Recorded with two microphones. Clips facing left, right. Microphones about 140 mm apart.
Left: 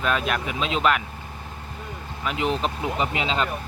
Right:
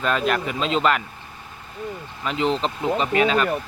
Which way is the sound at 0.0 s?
5° left (ahead or behind).